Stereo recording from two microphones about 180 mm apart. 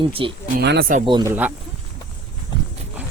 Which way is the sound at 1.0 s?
25° right (ahead or behind).